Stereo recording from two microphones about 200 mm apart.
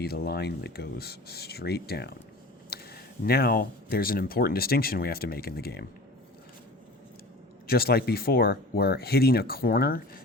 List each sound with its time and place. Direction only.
0.0 s speech: 50° left (ahead or behind)
7.7 s speech: 50° left (ahead or behind)